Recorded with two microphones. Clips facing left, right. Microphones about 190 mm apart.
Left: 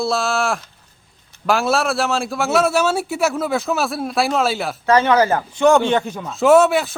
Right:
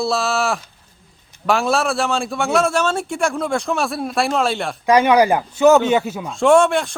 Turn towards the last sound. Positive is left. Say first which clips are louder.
# left 1 dB
turn(degrees=5)  # may be behind; listen again after turning